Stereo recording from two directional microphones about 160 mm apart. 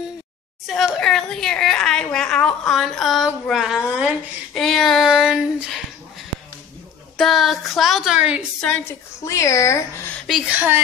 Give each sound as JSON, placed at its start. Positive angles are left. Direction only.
{"t": 0.7, "sound": "a woman's voice", "side_deg": 0}
{"t": 4.6, "sound": "child singing", "side_deg": 0}
{"t": 7.2, "sound": "child singing", "side_deg": 0}
{"t": 9.2, "sound": "speech", "side_deg": 20}
{"t": 10.2, "sound": "a woman's voice", "side_deg": -5}